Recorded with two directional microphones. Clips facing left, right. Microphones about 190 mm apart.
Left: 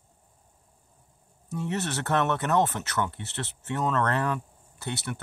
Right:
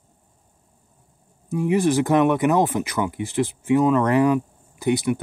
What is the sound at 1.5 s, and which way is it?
Speech, 10° right (ahead or behind).